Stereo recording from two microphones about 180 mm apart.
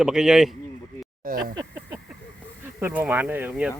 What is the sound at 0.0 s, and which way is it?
Speech, 5° right (ahead or behind).